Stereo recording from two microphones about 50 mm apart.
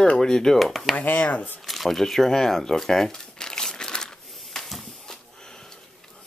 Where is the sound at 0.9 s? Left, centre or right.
Left.